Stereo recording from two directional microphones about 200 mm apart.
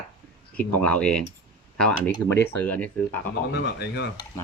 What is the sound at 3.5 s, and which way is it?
Speech, 55° left (ahead or behind).